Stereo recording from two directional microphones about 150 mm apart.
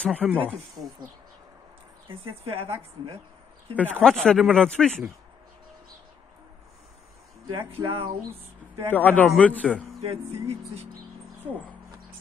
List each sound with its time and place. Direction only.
0.0 s a man's voice: 5° left (ahead or behind)
2.0 s speech: 40° right (ahead or behind)
3.7 s speech: 10° left (ahead or behind)
7.5 s speech: 35° right (ahead or behind)
8.9 s a man's voice: 10° left (ahead or behind)
9.9 s speech: 45° right (ahead or behind)